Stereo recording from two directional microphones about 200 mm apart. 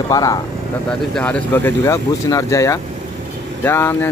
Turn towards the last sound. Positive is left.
turn(degrees=10)  # may be behind; listen again after turning